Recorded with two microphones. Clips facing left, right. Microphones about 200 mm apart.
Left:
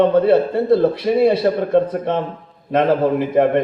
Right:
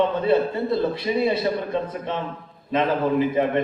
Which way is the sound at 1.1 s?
55° left (ahead or behind).